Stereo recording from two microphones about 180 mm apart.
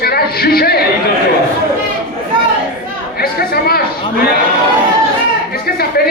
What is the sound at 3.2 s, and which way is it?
Speech, 55° left (ahead or behind).